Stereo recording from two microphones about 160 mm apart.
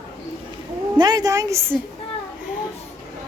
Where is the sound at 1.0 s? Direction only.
25° right (ahead or behind).